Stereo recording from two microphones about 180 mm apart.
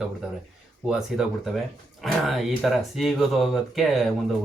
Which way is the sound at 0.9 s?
5° right (ahead or behind).